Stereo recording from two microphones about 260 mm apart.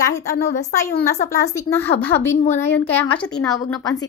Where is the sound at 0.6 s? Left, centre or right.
Centre.